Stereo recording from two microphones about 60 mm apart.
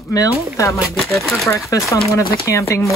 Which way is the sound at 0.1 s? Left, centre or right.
Left.